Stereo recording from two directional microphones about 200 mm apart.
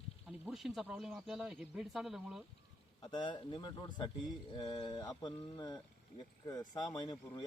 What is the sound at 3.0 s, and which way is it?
A man's voice, 25° left (ahead or behind).